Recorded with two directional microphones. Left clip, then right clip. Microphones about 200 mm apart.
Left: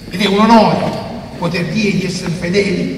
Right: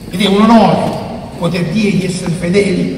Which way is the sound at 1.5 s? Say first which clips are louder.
Right 1 dB; centre (ahead or behind).